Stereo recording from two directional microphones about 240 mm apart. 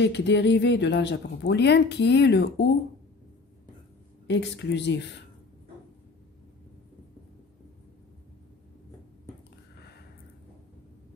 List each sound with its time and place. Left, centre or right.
0.0 s speech: left
4.3 s speech: left